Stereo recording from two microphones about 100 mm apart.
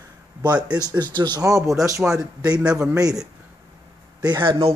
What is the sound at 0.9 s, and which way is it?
Speech, 50° right (ahead or behind).